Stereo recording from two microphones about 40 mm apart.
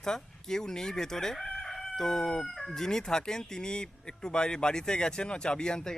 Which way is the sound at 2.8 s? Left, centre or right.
Centre.